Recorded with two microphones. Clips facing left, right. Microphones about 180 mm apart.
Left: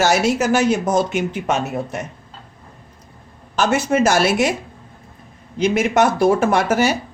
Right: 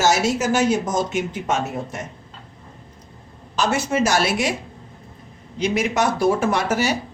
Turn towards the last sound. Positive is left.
turn(degrees=55)  # may be behind; listen again after turning